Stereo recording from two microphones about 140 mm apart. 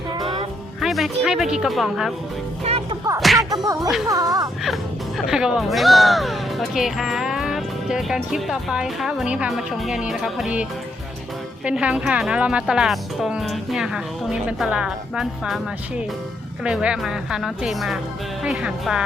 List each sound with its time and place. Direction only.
0.2 s music: 35° right (ahead or behind)
0.8 s speech: centre (ahead or behind)
3.2 s speech: centre (ahead or behind)
3.5 s speech: 25° right (ahead or behind)
3.8 s speech: centre (ahead or behind)
4.1 s speech: 25° right (ahead or behind)
4.6 s speech: centre (ahead or behind)
16.6 s speech: 5° right (ahead or behind)